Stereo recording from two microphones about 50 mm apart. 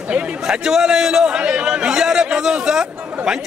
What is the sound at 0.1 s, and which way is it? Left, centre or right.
Speech, right.